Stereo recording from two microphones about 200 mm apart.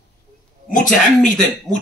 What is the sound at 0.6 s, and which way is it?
A man's voice, 40° left (ahead or behind).